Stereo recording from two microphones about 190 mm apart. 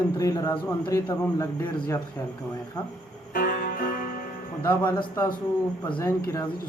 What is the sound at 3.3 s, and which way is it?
Music, 45° left (ahead or behind).